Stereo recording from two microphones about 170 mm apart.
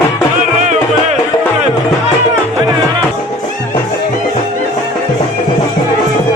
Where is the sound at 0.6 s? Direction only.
45° right (ahead or behind).